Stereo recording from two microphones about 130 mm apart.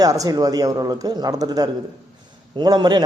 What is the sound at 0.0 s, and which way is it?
A man's voice, 30° right (ahead or behind).